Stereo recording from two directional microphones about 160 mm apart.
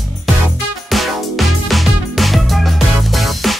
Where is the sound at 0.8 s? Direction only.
Centre (ahead or behind).